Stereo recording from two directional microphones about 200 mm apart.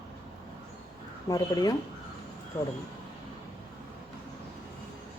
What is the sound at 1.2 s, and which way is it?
Speech, 20° left (ahead or behind).